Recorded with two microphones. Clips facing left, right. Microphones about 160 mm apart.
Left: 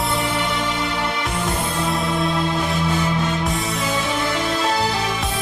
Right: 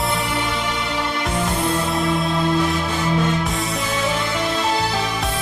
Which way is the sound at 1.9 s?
Centre (ahead or behind).